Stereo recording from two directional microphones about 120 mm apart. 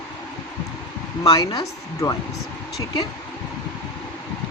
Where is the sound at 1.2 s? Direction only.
30° left (ahead or behind).